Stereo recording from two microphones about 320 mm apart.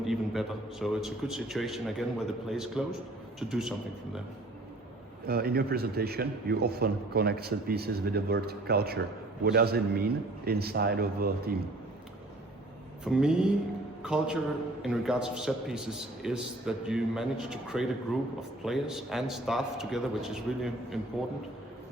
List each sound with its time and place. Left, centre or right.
0.0 s a man's voice: centre
5.2 s a man's voice: right
13.1 s a man's voice: centre